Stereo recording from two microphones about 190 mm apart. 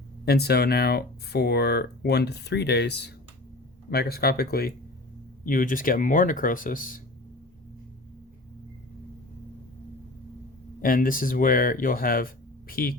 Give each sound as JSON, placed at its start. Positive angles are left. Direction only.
{"t": 0.3, "sound": "speech", "side_deg": 55}
{"t": 10.8, "sound": "speech", "side_deg": 45}